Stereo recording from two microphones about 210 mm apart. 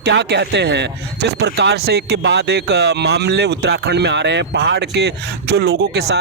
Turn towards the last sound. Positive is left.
turn(degrees=-50)  # may be behind; listen again after turning